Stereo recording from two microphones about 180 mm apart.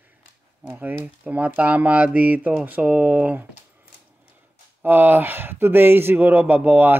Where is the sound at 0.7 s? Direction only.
10° right (ahead or behind).